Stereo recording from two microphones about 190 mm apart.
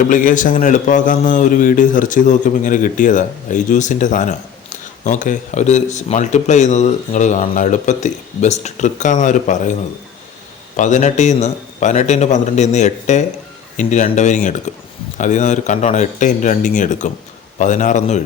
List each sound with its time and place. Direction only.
0.0 s a man's voice: 45° left (ahead or behind)
10.8 s a man's voice: 40° left (ahead or behind)